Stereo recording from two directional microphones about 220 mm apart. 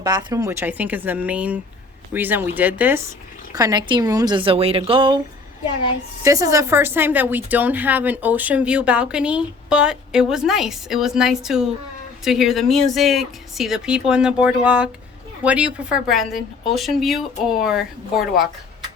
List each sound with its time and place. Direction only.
0.0 s a woman's voice: 20° right (ahead or behind)
6.2 s speech: 15° right (ahead or behind)